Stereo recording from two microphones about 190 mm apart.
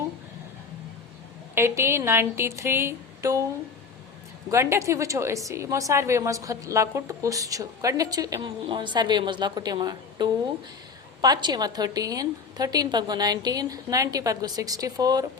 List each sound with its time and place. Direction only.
1.5 s a woman's voice: 15° right (ahead or behind)
4.5 s a woman's voice: 15° right (ahead or behind)